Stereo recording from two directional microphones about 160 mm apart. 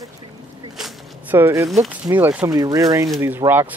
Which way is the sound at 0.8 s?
10° right (ahead or behind).